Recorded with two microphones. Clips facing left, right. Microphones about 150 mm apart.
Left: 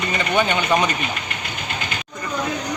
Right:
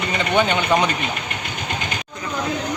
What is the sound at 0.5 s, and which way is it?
Speech, 15° right (ahead or behind).